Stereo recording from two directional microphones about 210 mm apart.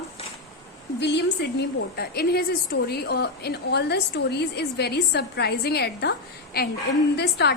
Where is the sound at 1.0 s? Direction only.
55° left (ahead or behind).